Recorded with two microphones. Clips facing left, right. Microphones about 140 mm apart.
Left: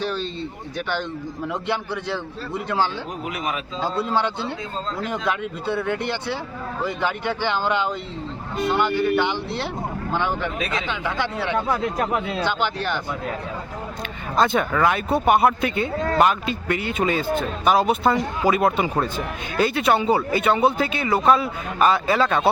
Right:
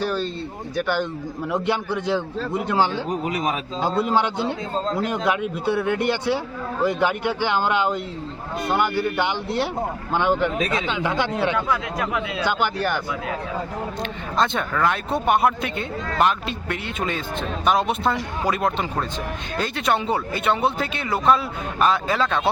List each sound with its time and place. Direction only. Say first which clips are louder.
0.0 s a sound: right 2 dB; 5° right (ahead or behind)
0.8 s speech: right 3 dB; 10° right (ahead or behind)
3.2 s speech: right 2 dB; 40° right (ahead or behind)
3.8 s speech: right 2 dB; 15° right (ahead or behind)
11.5 s speech: left 1 dB; 45° left (ahead or behind)
12.5 s speech: right 5 dB; 10° right (ahead or behind)
14.3 s a man's voice: left 3 dB; 5° left (ahead or behind)